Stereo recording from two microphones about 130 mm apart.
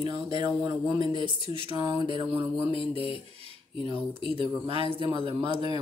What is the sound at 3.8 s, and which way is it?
Speech, 40° right (ahead or behind).